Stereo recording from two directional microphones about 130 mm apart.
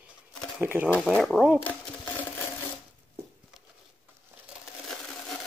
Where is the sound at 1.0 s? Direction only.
5° left (ahead or behind).